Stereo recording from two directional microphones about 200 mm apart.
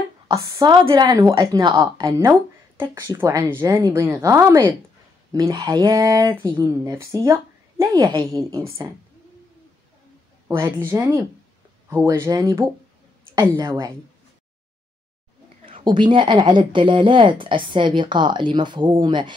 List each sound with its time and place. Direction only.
0.3 s speech: 15° right (ahead or behind)
10.9 s speech: 10° right (ahead or behind)
15.7 s speech: 25° right (ahead or behind)